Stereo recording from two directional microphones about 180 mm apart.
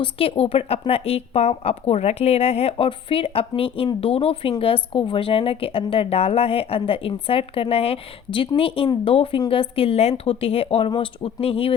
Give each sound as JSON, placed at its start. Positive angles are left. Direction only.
{"t": 0.0, "sound": "speech", "side_deg": 30}